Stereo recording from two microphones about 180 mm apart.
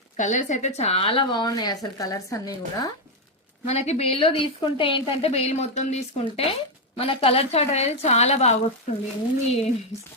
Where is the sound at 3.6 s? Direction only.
35° left (ahead or behind).